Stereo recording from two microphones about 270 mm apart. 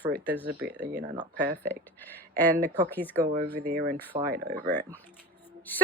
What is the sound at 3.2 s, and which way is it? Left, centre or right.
Speech, right.